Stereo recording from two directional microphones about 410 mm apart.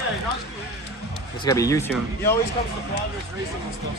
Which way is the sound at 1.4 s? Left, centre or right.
Centre.